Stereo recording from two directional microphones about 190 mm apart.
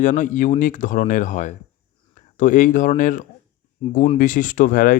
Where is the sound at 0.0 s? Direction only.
40° left (ahead or behind).